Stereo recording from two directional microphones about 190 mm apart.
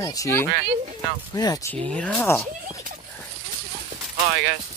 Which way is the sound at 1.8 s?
5° left (ahead or behind).